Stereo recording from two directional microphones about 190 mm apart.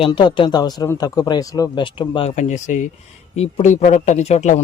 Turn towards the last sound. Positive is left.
turn(degrees=35)  # may be behind; listen again after turning